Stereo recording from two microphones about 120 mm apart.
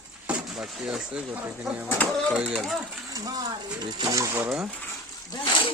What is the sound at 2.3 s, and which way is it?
Speech, 5° right (ahead or behind).